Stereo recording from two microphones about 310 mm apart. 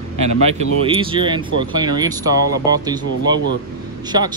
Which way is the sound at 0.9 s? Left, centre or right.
Centre.